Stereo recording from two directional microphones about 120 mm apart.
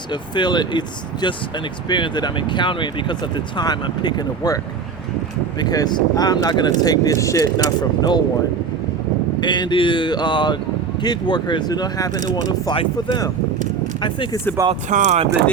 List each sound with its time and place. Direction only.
0.1 s speech: 40° left (ahead or behind)
9.4 s speech: 40° left (ahead or behind)
14.8 s speech: 80° right